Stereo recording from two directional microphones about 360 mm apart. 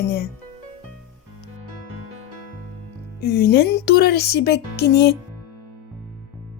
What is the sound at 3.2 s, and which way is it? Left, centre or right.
Speech, left.